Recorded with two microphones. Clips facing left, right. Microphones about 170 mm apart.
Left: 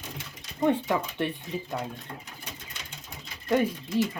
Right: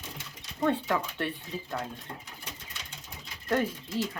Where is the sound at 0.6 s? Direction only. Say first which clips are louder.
Left 3 dB; 15° left (ahead or behind).